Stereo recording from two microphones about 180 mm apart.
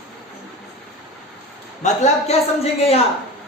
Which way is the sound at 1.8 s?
35° left (ahead or behind).